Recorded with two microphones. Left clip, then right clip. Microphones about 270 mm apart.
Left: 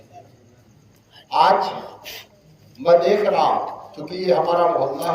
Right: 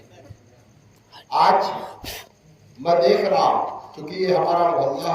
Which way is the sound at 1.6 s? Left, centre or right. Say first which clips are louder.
Even; right.